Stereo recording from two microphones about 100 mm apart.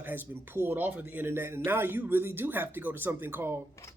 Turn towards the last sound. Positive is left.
turn(degrees=-20)  # may be behind; listen again after turning